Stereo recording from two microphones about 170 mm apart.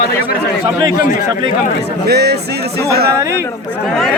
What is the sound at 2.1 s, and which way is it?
Speech, 70° right (ahead or behind).